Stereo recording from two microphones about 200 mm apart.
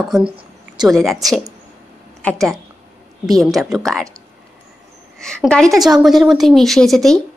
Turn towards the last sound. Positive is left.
turn(degrees=0)  # may be behind; listen again after turning